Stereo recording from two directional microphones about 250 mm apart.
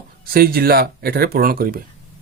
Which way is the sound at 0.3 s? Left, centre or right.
Right.